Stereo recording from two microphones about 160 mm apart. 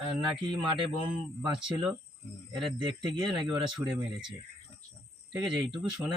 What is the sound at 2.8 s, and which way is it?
Speech, 30° right (ahead or behind).